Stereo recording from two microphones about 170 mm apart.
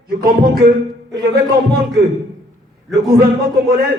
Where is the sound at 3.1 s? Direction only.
65° right (ahead or behind).